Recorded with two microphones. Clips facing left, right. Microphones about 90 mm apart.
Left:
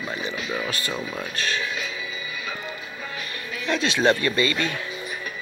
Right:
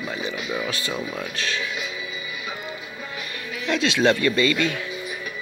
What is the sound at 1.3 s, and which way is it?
Mantra, 40° left (ahead or behind).